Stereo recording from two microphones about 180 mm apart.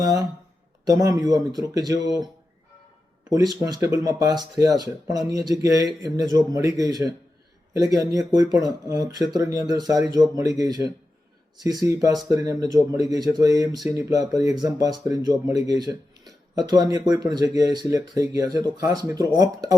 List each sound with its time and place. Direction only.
0.0 s speech: 20° right (ahead or behind)
8.5 s speech: 20° right (ahead or behind)